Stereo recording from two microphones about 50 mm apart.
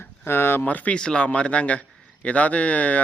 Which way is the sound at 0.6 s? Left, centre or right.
Left.